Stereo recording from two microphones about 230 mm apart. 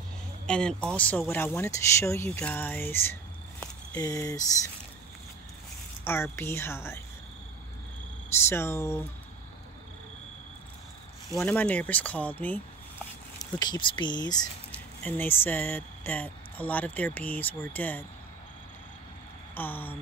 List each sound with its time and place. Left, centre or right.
0.5 s speech: centre
6.0 s speech: centre
8.5 s speech: centre
11.3 s speech: centre
13.4 s speech: centre
19.5 s speech: centre